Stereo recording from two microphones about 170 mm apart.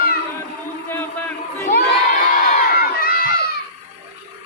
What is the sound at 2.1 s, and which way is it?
Crowd, 50° left (ahead or behind).